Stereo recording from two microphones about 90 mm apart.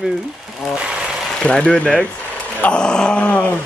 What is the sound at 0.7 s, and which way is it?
Sewing machine, 10° right (ahead or behind).